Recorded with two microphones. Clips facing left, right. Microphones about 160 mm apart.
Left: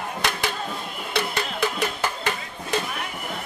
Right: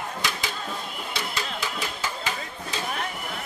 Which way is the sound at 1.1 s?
60° left (ahead or behind).